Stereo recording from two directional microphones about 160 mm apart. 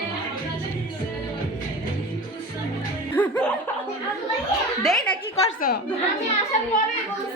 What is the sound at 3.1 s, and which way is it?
Music, 10° left (ahead or behind).